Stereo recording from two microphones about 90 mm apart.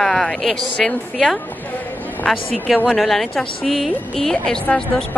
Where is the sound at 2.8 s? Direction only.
Centre (ahead or behind).